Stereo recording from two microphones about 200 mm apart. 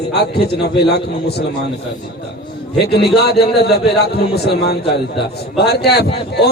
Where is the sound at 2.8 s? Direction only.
55° left (ahead or behind).